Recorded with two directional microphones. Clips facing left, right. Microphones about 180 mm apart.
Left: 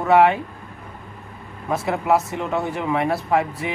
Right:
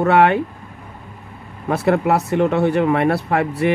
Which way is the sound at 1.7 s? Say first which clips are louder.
Right 4 dB; 65° right (ahead or behind).